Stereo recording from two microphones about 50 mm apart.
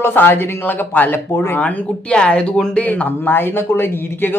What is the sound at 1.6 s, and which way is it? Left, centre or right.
Speech, left.